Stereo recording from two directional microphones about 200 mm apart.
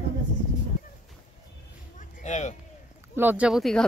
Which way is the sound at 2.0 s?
40° left (ahead or behind).